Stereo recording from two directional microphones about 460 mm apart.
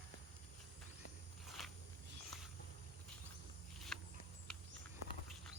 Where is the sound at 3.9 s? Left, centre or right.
Centre.